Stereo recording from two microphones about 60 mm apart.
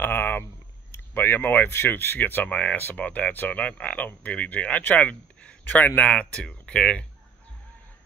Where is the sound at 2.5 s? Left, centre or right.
Left.